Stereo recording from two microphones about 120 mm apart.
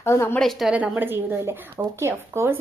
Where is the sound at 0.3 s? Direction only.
Centre (ahead or behind).